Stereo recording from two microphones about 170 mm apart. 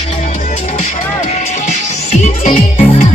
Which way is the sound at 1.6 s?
40° left (ahead or behind).